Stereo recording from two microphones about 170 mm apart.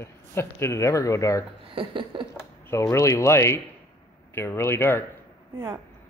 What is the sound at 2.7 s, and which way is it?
Speech, 15° left (ahead or behind).